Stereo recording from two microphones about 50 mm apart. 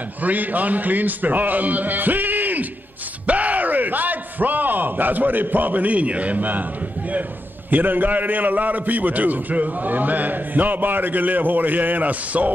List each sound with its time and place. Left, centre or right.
0.2 s a man's voice: right